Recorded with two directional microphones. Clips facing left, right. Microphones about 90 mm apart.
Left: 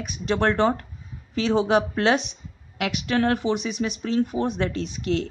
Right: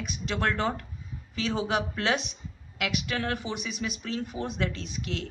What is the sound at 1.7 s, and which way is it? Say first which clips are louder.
Speech: left 7 dB; 50° left (ahead or behind).